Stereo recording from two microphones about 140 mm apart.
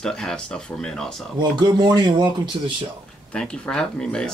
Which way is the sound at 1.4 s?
30° right (ahead or behind).